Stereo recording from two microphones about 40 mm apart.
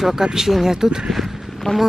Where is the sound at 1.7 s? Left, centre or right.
Centre.